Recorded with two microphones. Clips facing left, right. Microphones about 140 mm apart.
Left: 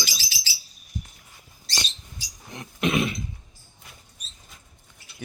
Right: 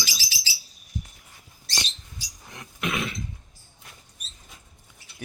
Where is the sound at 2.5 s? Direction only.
20° left (ahead or behind).